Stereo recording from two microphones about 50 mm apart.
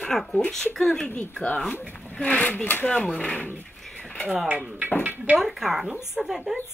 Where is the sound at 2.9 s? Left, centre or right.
Left.